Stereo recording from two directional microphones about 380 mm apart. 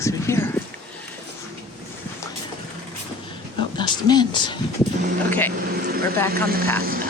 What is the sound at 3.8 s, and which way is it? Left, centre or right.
Speech, centre.